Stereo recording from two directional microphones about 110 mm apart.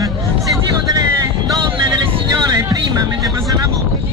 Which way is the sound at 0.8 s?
35° right (ahead or behind).